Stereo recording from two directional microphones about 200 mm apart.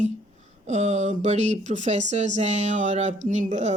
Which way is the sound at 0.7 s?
35° right (ahead or behind).